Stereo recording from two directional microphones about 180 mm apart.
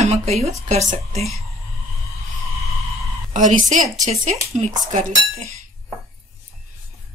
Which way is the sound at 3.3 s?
45° right (ahead or behind).